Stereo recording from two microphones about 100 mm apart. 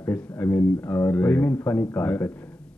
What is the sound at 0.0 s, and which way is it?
A man's voice, 15° left (ahead or behind).